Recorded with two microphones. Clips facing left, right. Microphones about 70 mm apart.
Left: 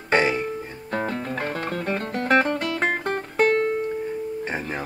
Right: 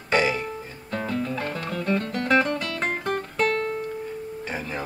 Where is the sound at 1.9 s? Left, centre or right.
Left.